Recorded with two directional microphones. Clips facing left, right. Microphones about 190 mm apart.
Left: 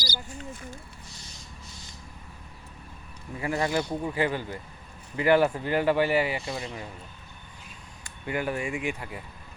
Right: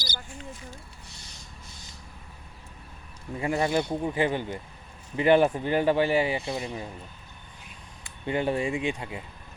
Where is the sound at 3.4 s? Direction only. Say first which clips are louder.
Right 2 dB; 25° right (ahead or behind).